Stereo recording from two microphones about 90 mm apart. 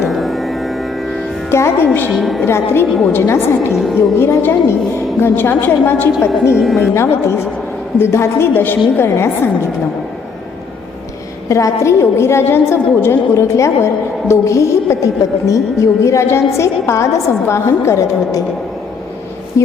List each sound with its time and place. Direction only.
0.1 s music: centre (ahead or behind)
1.5 s a woman's voice: 30° left (ahead or behind)
2.0 s a woman's voice: centre (ahead or behind)
2.4 s a woman's voice: 25° left (ahead or behind)
3.7 s a woman's voice: 5° right (ahead or behind)
4.2 s a woman's voice: 30° left (ahead or behind)
6.6 s a woman's voice: centre (ahead or behind)
6.9 s a woman's voice: 30° left (ahead or behind)
11.4 s a woman's voice: 35° left (ahead or behind)
19.6 s a woman's voice: 35° left (ahead or behind)